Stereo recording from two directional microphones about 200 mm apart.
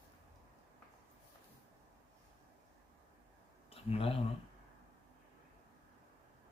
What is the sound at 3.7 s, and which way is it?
Speech, 30° left (ahead or behind).